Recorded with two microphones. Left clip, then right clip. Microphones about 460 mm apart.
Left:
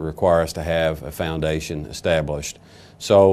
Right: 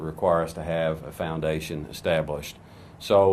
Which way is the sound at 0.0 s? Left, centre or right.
Left.